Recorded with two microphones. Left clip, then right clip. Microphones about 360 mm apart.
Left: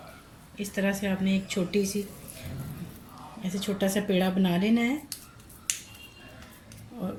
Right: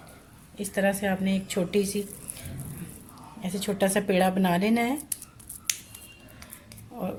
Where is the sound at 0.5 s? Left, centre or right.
Right.